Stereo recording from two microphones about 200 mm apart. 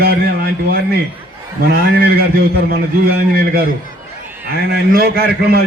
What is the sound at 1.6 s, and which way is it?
A man's voice, 55° right (ahead or behind).